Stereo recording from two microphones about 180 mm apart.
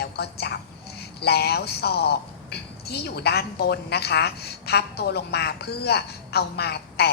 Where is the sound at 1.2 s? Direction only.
65° left (ahead or behind).